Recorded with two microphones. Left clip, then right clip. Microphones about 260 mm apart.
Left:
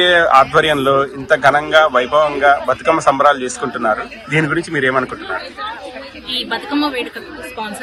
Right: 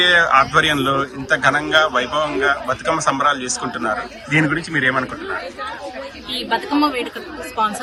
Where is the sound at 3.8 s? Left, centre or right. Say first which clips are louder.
Left 6 dB; centre.